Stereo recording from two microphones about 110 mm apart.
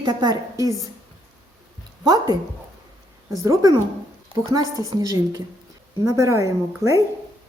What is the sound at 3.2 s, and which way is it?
A woman's voice, 30° right (ahead or behind).